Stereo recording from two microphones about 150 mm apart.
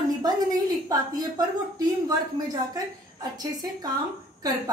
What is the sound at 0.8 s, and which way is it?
A woman's voice, 25° right (ahead or behind).